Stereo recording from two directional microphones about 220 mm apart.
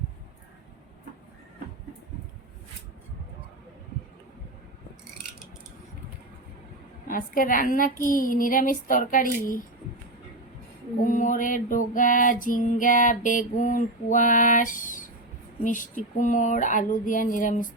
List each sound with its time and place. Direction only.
7.1 s female singing: 40° left (ahead or behind)
11.0 s female singing: 35° left (ahead or behind)